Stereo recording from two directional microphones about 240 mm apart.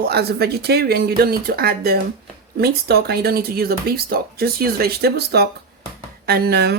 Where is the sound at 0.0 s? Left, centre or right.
Right.